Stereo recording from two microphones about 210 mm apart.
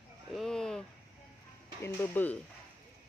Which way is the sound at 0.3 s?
Centre (ahead or behind).